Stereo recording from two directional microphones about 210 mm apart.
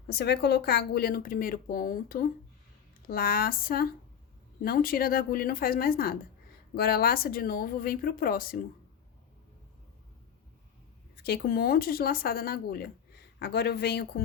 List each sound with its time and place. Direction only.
0.1 s speech: 50° left (ahead or behind)
11.2 s speech: 50° left (ahead or behind)